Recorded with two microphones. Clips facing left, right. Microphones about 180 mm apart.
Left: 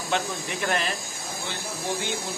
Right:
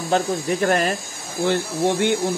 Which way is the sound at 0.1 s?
40° right (ahead or behind).